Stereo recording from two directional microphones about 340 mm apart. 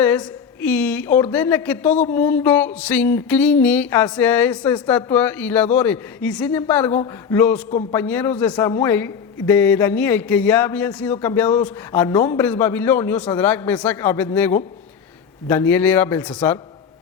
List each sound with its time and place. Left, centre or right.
0.0 s a woman's voice: centre
7.7 s a man's voice: centre
7.9 s a woman's voice: centre